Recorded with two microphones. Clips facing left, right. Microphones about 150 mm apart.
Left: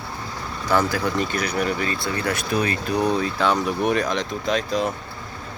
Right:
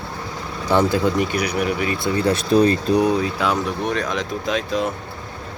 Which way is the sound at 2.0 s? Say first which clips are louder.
Right 6 dB; 25° right (ahead or behind).